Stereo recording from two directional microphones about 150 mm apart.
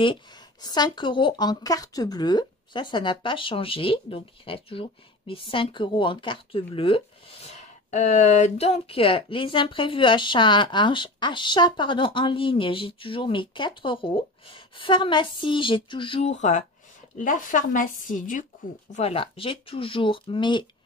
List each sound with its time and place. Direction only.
0.0 s speech: 30° left (ahead or behind)
7.5 s speech: 55° left (ahead or behind); by 16.3 s 35° left (ahead or behind)
16.3 s speech: 50° left (ahead or behind)
18.9 s speech: 45° left (ahead or behind)